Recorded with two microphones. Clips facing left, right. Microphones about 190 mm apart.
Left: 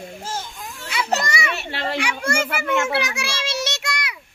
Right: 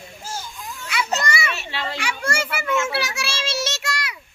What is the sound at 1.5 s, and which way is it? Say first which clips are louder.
Speech: left 4 dB; 55° left (ahead or behind).